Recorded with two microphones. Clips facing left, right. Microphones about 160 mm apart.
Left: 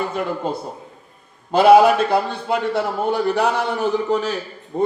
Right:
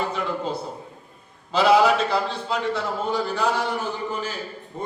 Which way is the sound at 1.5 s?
55° left (ahead or behind).